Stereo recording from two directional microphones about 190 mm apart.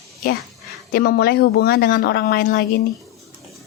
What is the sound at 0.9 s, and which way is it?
A woman's voice, 50° left (ahead or behind).